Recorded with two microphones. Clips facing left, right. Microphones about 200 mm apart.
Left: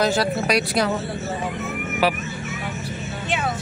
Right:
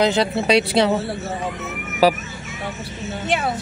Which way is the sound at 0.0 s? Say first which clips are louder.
Right 2 dB; 20° right (ahead or behind).